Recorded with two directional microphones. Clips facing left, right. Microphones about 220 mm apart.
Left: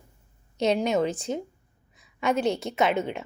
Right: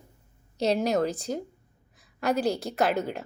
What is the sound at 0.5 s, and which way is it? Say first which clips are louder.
Speech: left 1 dB; 35° right (ahead or behind).